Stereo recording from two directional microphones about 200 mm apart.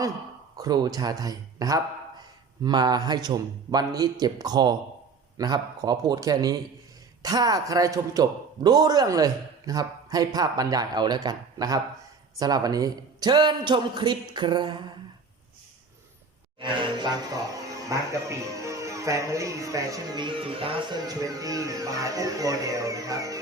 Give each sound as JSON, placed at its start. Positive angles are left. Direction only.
{"t": 0.5, "sound": "a man's voice", "side_deg": -20}
{"t": 16.6, "sound": "a man's voice", "side_deg": -25}